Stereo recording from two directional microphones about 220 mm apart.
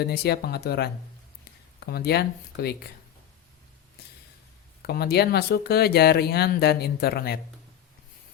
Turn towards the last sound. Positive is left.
turn(degrees=45)  # may be behind; listen again after turning